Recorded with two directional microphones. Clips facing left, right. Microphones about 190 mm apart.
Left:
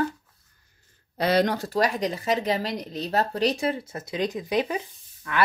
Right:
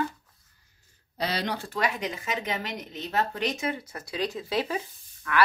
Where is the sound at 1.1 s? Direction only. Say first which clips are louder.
Left 8 dB; 55° left (ahead or behind).